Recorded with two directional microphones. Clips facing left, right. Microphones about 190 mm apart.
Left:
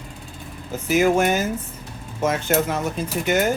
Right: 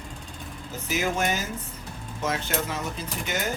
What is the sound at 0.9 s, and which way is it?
Speech, 55° left (ahead or behind).